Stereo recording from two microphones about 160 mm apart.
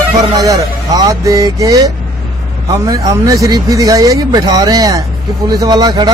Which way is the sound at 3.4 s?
25° right (ahead or behind).